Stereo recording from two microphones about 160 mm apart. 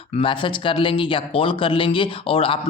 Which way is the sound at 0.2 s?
30° left (ahead or behind).